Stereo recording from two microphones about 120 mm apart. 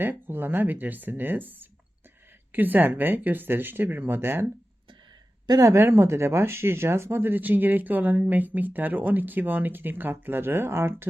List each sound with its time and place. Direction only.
0.0 s speech: 15° right (ahead or behind)
5.5 s speech: 25° right (ahead or behind)